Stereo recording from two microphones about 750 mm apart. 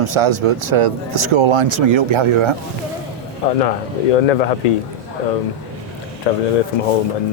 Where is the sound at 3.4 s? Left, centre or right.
Left.